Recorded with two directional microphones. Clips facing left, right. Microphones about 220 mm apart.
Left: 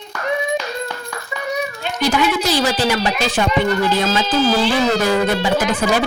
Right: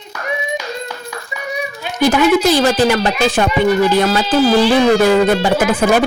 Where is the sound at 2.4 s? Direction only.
50° right (ahead or behind).